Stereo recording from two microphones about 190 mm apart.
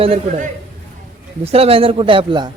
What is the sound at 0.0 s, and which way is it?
Speech, 30° right (ahead or behind).